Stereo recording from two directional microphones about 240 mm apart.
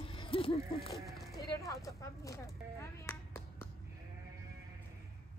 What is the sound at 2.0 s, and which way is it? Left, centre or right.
Speech, centre.